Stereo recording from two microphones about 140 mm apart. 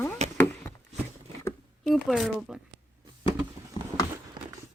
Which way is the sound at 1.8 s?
Centre (ahead or behind).